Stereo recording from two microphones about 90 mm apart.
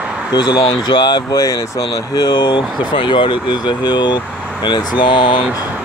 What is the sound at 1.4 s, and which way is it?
Speech, 40° left (ahead or behind).